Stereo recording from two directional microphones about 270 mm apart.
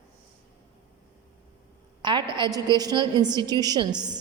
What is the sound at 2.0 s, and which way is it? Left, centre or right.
A woman's voice, centre.